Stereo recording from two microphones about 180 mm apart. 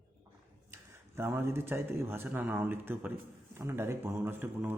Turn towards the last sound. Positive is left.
turn(degrees=-10)  # may be behind; listen again after turning